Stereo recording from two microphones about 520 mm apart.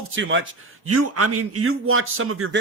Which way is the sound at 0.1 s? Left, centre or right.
Right.